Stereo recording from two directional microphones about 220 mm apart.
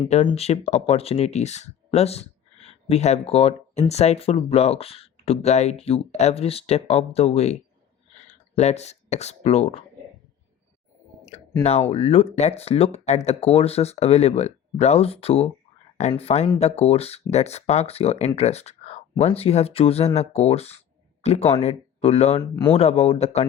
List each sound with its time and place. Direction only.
0.0 s speech: 25° left (ahead or behind)
11.6 s speech: 30° left (ahead or behind)